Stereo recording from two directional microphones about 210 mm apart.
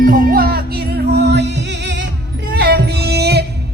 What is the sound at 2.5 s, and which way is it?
Music, 50° right (ahead or behind).